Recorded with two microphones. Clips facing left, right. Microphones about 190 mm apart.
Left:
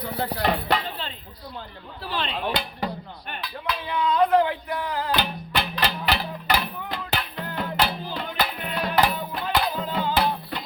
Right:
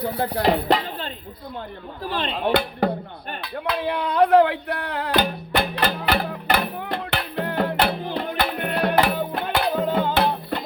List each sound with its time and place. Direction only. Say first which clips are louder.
0.3 s dishes: right 5 dB; 40° right (ahead or behind)
2.8 s music: right 8 dB; 55° right (ahead or behind)
3.4 s speech: right 7 dB; 60° right (ahead or behind)
5.1 s music: right 9 dB; 50° right (ahead or behind)